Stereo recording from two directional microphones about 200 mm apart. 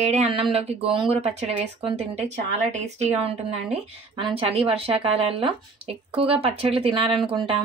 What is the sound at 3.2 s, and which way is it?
Speech, 30° right (ahead or behind).